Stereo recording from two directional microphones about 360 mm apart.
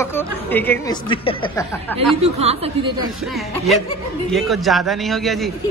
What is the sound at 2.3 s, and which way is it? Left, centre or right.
Speech, centre.